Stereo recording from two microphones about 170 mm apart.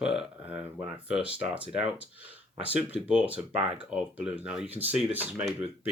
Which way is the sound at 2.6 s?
10° right (ahead or behind).